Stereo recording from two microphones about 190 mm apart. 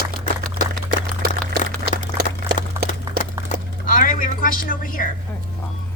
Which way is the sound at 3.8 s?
45° left (ahead or behind).